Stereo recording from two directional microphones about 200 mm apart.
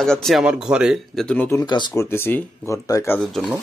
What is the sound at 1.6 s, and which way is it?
Speech, 20° left (ahead or behind).